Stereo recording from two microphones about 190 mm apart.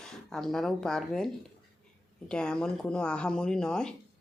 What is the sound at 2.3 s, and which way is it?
Speech, 5° left (ahead or behind).